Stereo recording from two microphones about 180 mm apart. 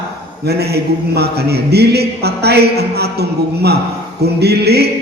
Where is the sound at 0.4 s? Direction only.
65° right (ahead or behind).